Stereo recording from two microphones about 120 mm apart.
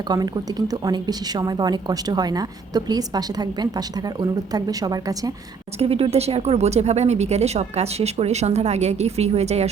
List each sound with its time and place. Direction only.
0.7 s speech: 35° right (ahead or behind)
5.8 s speech: 55° right (ahead or behind)